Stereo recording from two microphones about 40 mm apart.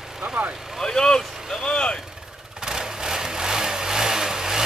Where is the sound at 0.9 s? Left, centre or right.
Centre.